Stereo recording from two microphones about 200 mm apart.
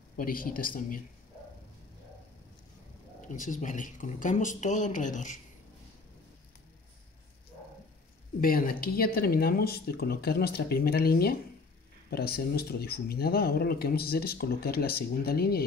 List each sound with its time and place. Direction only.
0.2 s speech: 45° left (ahead or behind)
3.3 s speech: 40° left (ahead or behind)
8.4 s speech: 45° left (ahead or behind)